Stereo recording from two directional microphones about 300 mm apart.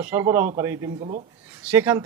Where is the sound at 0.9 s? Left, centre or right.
Centre.